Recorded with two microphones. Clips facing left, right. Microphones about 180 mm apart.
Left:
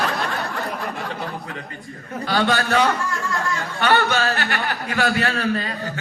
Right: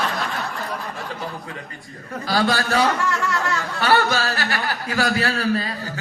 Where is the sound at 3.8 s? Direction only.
40° right (ahead or behind).